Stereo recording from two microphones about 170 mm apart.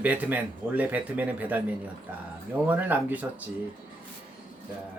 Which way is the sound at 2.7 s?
10° right (ahead or behind).